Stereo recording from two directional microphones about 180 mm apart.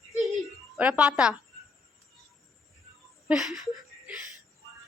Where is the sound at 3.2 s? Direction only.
Centre (ahead or behind).